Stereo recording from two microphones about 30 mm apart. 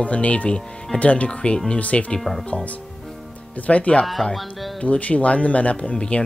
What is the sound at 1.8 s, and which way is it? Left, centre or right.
Speech, left.